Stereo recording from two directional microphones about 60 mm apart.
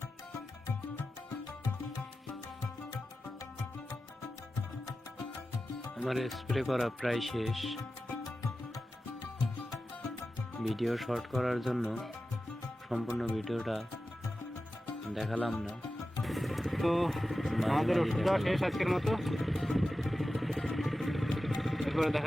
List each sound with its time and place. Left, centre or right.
6.0 s speech: centre
10.6 s speech: centre
13.1 s speech: centre
15.1 s speech: centre
16.2 s vehicle: centre
21.6 s music: centre